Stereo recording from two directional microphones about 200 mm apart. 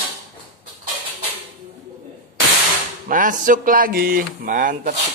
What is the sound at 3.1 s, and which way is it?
Speech, 40° right (ahead or behind).